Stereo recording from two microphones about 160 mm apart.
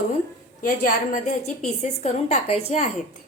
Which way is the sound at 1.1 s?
45° left (ahead or behind).